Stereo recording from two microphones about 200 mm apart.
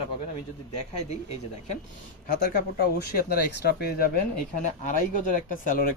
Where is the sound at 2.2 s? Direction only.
50° left (ahead or behind).